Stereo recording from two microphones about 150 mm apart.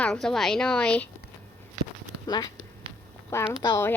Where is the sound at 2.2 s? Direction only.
25° left (ahead or behind).